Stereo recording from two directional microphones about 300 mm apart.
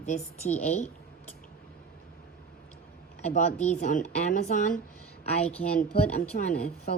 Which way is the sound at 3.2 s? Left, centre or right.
Left.